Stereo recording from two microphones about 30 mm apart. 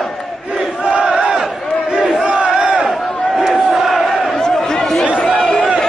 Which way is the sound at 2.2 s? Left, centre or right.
Right.